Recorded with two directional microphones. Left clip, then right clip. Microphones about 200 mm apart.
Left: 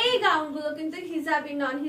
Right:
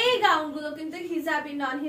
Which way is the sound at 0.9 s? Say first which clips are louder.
Right 1 dB; 15° left (ahead or behind).